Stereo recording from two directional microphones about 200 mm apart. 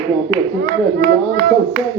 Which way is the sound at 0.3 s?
45° right (ahead or behind).